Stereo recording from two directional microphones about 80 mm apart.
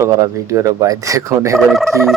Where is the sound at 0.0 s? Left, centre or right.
Right.